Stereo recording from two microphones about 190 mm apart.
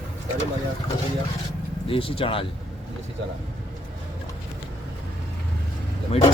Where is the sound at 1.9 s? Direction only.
30° left (ahead or behind).